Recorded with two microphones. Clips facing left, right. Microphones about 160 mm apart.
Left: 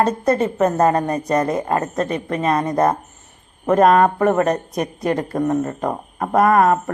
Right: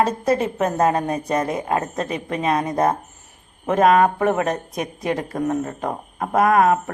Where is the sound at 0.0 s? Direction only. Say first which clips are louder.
Left 2 dB; 5° right (ahead or behind).